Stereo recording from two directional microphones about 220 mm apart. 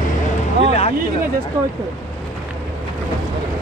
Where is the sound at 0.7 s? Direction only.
25° left (ahead or behind).